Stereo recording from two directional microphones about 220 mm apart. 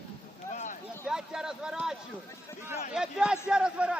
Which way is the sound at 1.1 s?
5° right (ahead or behind).